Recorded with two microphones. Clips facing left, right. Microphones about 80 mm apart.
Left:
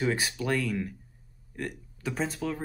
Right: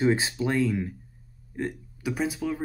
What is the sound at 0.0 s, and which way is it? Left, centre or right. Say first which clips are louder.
Speech: right 5 dB; right.